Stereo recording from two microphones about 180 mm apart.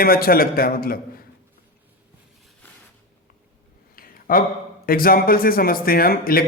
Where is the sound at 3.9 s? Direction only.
50° left (ahead or behind).